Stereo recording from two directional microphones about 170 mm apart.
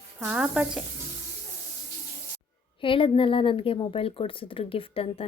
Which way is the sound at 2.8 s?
30° left (ahead or behind).